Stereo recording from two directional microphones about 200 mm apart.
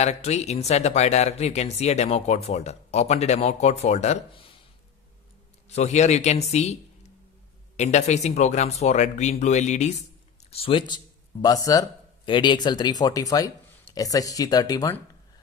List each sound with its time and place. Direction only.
0.0 s speech: 35° left (ahead or behind)
5.7 s speech: 35° left (ahead or behind); by 15.0 s 20° left (ahead or behind)